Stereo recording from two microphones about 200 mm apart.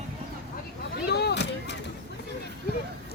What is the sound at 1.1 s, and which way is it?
Speech, 55° left (ahead or behind).